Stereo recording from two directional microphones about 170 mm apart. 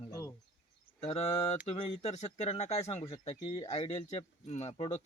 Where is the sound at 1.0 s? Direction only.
40° left (ahead or behind).